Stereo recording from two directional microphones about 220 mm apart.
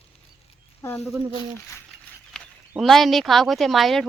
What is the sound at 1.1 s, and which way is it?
Speech, 20° right (ahead or behind).